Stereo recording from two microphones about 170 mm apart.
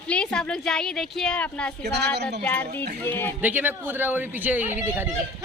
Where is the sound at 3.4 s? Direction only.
10° right (ahead or behind).